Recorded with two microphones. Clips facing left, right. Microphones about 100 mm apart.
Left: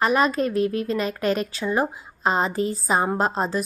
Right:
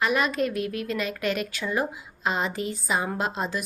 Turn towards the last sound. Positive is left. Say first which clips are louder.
# left 5 dB
turn(degrees=35)  # may be behind; listen again after turning